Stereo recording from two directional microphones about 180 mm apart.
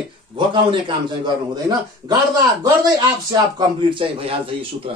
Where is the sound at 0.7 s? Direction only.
25° right (ahead or behind).